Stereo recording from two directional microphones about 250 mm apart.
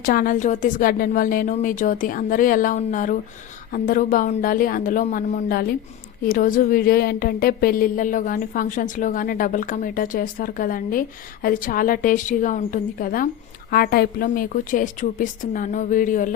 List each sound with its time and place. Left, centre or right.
0.0 s a woman's voice: left